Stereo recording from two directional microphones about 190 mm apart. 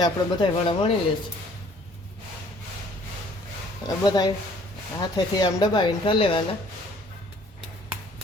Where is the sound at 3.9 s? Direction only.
20° left (ahead or behind).